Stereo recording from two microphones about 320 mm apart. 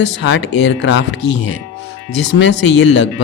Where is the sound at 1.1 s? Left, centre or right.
Left.